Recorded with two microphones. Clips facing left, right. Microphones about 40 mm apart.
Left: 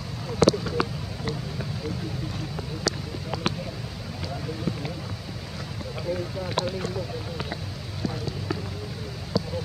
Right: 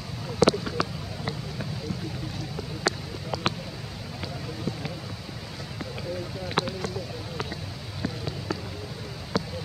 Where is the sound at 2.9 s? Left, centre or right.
Right.